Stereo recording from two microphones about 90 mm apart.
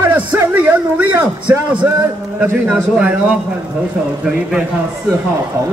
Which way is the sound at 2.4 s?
10° right (ahead or behind).